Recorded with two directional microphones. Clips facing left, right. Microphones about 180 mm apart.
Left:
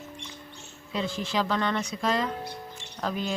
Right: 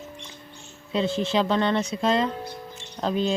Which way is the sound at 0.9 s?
25° right (ahead or behind).